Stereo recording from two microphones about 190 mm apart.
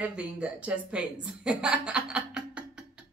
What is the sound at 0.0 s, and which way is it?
A woman's voice, 5° right (ahead or behind).